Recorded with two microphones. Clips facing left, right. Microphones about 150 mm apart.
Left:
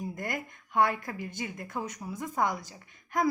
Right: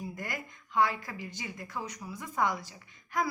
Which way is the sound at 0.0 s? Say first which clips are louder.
Left 4 dB; 50° left (ahead or behind).